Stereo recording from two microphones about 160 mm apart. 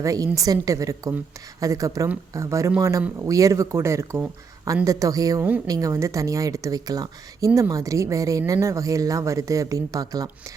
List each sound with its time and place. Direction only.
0.0 s speech: 20° right (ahead or behind)